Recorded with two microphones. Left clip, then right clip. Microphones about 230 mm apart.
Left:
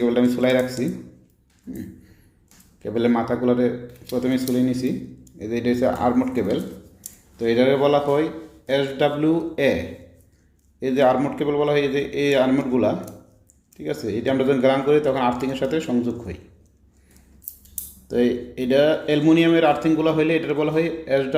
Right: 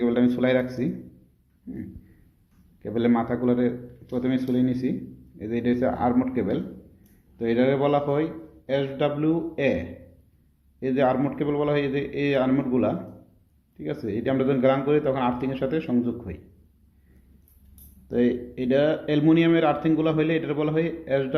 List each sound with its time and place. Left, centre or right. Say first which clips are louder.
0.0 s speech: left 3 dB; centre
2.8 s speech: left 3 dB; centre
18.1 s speech: left 3 dB; centre